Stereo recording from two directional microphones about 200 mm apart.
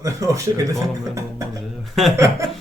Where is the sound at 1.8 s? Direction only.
Centre (ahead or behind).